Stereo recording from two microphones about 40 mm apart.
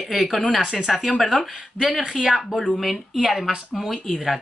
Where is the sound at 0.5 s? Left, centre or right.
Centre.